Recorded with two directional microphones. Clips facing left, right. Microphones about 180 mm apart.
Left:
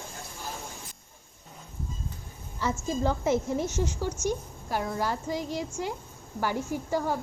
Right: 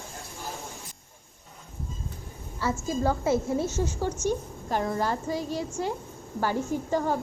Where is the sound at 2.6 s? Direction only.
15° left (ahead or behind).